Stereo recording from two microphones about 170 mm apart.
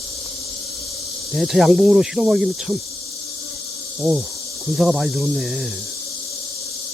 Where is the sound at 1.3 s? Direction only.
Centre (ahead or behind).